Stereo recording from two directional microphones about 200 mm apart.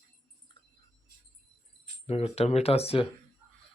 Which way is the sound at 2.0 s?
30° left (ahead or behind).